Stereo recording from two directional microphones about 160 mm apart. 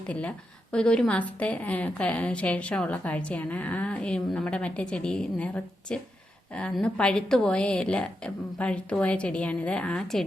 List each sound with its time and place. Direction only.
0.1 s a woman's voice: 10° left (ahead or behind)